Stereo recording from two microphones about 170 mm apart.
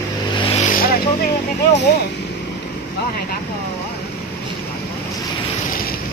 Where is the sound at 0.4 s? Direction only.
35° left (ahead or behind).